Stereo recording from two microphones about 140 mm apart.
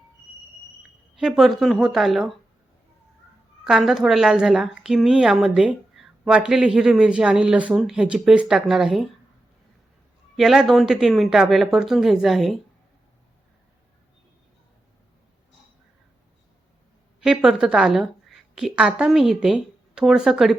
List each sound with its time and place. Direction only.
1.1 s a woman's voice: centre (ahead or behind)
3.6 s a woman's voice: 5° right (ahead or behind)
10.3 s a woman's voice: 5° right (ahead or behind)
17.2 s a woman's voice: 5° right (ahead or behind)